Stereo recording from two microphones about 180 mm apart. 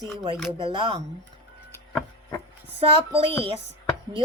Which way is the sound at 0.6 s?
30° right (ahead or behind).